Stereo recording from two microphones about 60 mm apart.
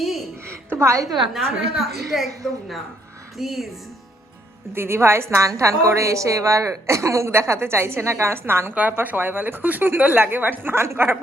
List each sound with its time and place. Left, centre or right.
0.4 s a sound: right
1.3 s a woman's voice: centre
4.7 s a woman's voice: right
5.5 s a woman's voice: right